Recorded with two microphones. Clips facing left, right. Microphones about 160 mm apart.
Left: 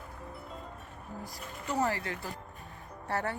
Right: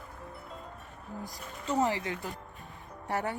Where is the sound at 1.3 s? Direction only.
20° right (ahead or behind).